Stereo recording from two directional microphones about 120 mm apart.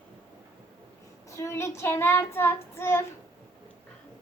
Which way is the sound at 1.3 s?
25° left (ahead or behind).